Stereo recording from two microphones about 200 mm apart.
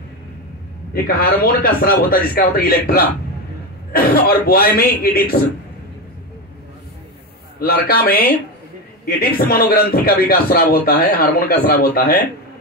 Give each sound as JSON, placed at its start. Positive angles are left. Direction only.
{"t": 0.9, "sound": "a man's voice", "side_deg": 50}
{"t": 7.5, "sound": "a man's voice", "side_deg": 50}